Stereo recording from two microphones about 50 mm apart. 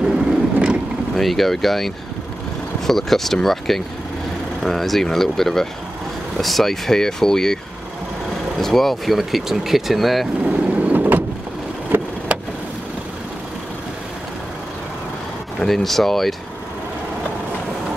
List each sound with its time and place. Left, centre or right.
0.0 s vehicle: centre
1.1 s speech: centre
8.5 s speech: centre
10.4 s vehicle: right
15.6 s speech: centre